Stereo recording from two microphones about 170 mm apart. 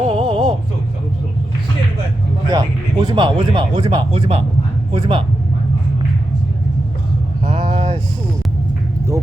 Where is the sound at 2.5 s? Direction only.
25° right (ahead or behind).